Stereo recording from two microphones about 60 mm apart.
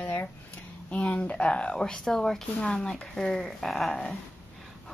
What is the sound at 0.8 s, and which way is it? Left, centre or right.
Speech, centre.